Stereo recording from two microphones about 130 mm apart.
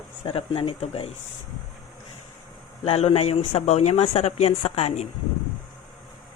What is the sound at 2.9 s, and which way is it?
Speech, 50° left (ahead or behind).